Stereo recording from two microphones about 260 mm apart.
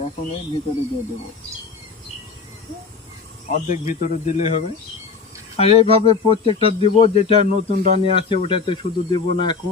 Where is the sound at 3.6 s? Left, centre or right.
Left.